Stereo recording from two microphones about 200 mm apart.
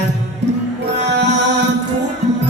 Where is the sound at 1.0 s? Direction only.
60° right (ahead or behind).